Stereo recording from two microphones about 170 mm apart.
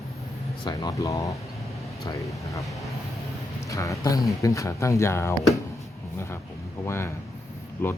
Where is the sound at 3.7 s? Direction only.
20° left (ahead or behind).